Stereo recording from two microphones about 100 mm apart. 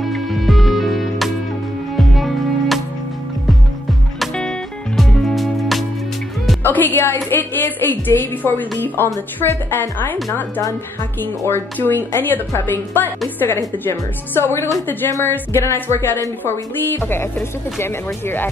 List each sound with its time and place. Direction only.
0.0 s music: centre (ahead or behind)
4.2 s music: 5° left (ahead or behind)
6.6 s a woman's voice: 20° left (ahead or behind)
11.1 s a woman's voice: 20° left (ahead or behind)